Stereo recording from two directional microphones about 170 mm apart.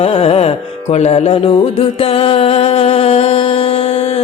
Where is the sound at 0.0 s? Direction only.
35° left (ahead or behind).